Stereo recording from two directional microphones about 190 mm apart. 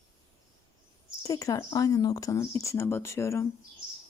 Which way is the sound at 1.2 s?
20° left (ahead or behind).